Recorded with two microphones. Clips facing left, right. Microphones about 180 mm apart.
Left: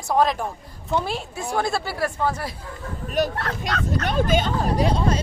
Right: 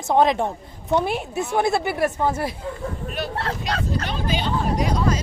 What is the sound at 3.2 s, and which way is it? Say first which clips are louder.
Speech: left 5 dB; 40° left (ahead or behind).